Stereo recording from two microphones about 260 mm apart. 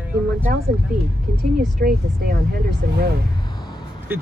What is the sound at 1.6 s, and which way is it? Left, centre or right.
Speech, right.